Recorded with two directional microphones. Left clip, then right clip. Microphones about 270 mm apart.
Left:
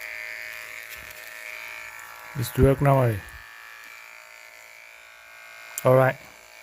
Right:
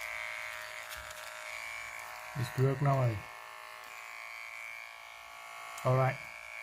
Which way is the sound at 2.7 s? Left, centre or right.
Left.